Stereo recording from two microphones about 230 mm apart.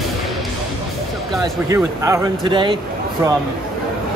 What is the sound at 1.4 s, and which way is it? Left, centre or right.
Speech, centre.